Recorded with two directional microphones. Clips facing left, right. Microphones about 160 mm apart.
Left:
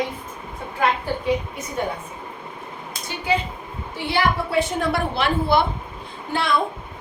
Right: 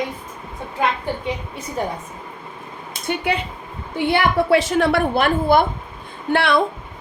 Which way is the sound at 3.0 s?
65° right (ahead or behind).